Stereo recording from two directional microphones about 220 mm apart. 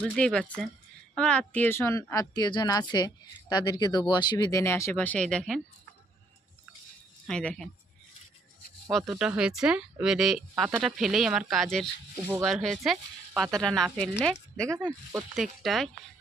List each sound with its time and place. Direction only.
0.0 s speech: 5° left (ahead or behind)
7.3 s speech: 5° left (ahead or behind)
8.9 s speech: centre (ahead or behind)
14.8 s speech: 5° right (ahead or behind)